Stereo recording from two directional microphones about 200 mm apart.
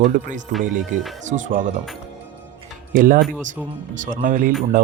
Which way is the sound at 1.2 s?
40° right (ahead or behind).